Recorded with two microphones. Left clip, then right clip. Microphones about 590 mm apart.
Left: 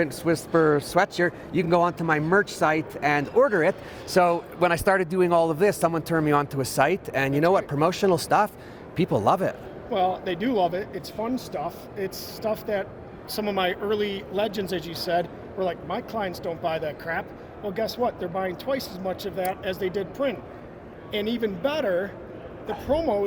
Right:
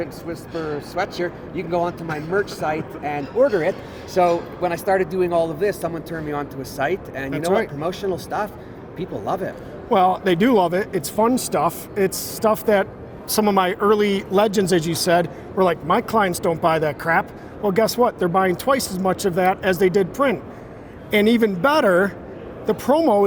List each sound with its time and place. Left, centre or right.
0.0 s a man's voice: left
9.9 s speech: right